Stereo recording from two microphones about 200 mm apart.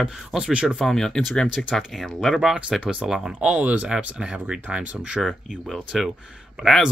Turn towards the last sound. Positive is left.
turn(degrees=0)  # may be behind; listen again after turning